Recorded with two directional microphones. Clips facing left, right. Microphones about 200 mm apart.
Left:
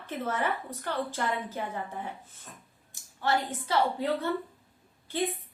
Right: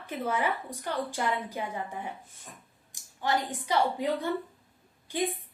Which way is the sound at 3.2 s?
15° right (ahead or behind).